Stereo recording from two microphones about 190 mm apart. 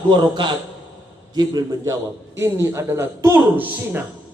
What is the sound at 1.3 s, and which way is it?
A man's voice, 20° right (ahead or behind).